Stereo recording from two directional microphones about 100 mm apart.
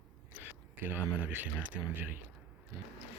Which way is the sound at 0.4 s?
20° right (ahead or behind).